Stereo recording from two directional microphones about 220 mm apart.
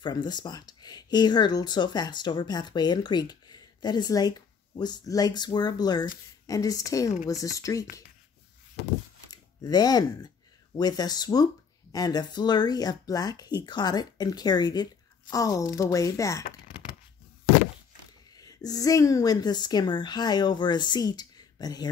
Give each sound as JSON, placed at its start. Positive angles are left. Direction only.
{"t": 0.0, "sound": "speech", "side_deg": 20}
{"t": 8.8, "sound": "a sound", "side_deg": 55}
{"t": 9.3, "sound": "speech", "side_deg": 20}
{"t": 18.3, "sound": "speech", "side_deg": 15}